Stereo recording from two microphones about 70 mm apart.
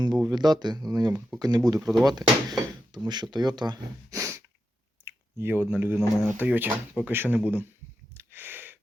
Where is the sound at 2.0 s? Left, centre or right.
Right.